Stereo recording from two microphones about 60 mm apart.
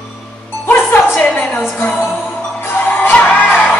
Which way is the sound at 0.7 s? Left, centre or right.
Left.